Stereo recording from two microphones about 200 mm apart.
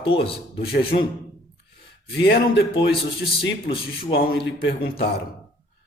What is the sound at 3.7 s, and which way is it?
Music, 50° left (ahead or behind).